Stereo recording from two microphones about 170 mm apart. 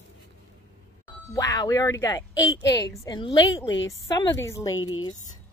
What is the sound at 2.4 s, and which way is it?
Speech, 90° left.